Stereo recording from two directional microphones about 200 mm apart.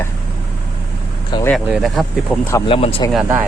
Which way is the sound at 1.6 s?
Centre (ahead or behind).